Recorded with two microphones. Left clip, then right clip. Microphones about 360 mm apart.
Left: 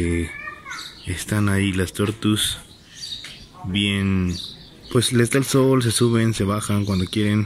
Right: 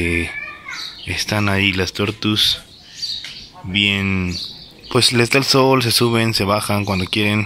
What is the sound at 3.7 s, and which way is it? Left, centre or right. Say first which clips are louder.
Speech: right 6 dB; centre.